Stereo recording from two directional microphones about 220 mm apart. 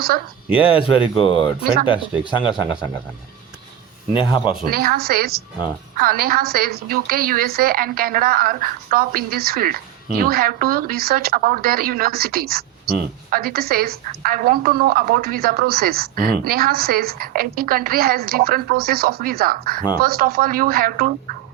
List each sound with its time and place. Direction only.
0.5 s speech: 25° left (ahead or behind)
4.2 s speech: 25° left (ahead or behind)
4.7 s a woman's voice: 40° right (ahead or behind)